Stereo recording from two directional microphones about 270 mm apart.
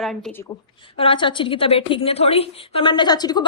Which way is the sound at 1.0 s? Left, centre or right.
Centre.